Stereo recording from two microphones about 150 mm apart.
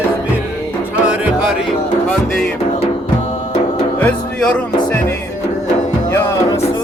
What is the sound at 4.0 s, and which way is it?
Music, 10° left (ahead or behind).